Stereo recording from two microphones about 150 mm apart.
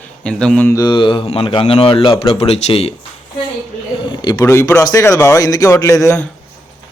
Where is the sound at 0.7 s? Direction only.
25° left (ahead or behind).